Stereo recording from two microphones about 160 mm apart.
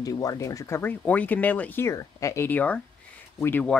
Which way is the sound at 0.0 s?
20° left (ahead or behind).